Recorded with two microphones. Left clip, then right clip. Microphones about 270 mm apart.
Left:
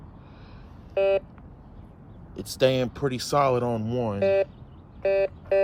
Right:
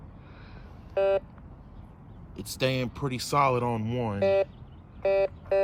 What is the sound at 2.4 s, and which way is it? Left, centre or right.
Speech, centre.